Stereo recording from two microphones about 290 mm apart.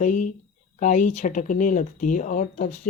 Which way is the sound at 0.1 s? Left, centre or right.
Left.